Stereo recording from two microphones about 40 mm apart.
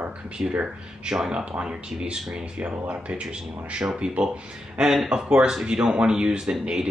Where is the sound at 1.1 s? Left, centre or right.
Centre.